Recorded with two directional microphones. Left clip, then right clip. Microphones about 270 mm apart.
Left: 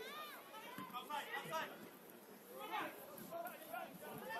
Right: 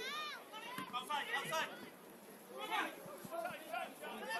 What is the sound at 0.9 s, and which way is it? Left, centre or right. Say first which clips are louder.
Chatter: right 6 dB; right.